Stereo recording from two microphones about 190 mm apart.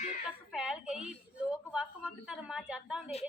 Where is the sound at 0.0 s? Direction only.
35° left (ahead or behind).